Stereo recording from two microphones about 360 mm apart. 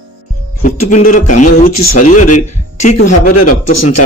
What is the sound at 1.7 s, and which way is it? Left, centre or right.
Speech, left.